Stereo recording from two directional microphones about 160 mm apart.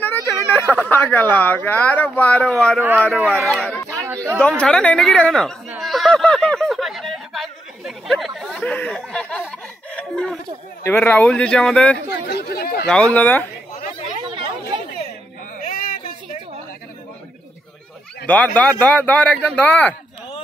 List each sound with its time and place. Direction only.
0.0 s speech: 15° left (ahead or behind)
5.7 s snicker: centre (ahead or behind)
10.8 s speech: 10° left (ahead or behind)
12.3 s chatter: 85° left
12.8 s speech: 5° left (ahead or behind)
14.2 s chatter: 30° right (ahead or behind)
15.6 s a sound: 60° left (ahead or behind)
18.2 s speech: 10° left (ahead or behind)